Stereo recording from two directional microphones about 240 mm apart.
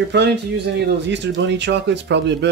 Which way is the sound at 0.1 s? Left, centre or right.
Right.